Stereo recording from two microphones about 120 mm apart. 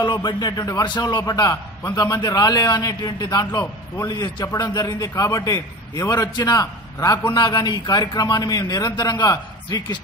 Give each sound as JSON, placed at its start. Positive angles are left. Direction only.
{"t": 0.0, "sound": "a man's voice", "side_deg": 35}